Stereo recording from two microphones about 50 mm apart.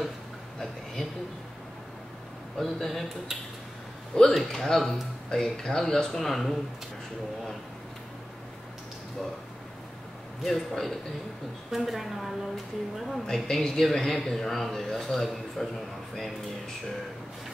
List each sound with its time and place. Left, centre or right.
2.5 s speech: centre
4.1 s a man's voice: centre
10.4 s a man's voice: centre